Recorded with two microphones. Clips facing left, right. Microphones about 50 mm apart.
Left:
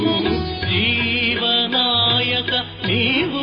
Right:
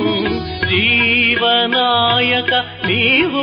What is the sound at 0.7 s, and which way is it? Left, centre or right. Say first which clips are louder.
Music: right 6 dB; right.